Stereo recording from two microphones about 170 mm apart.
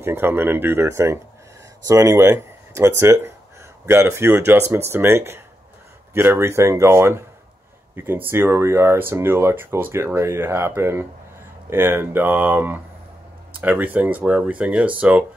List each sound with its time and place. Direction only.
0.0 s speech: 15° right (ahead or behind)